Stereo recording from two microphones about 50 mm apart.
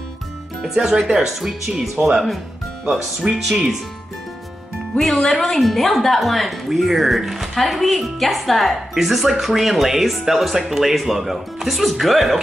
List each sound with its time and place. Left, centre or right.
0.7 s speech: centre
4.9 s a woman's voice: centre